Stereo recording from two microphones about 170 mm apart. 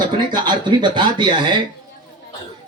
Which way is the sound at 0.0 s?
25° right (ahead or behind).